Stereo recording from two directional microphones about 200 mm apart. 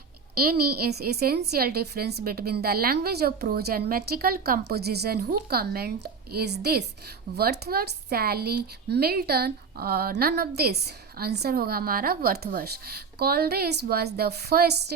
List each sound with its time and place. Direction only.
0.3 s a woman's voice: 50° right (ahead or behind)